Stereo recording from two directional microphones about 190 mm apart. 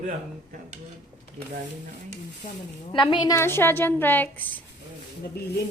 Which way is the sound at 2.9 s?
25° left (ahead or behind).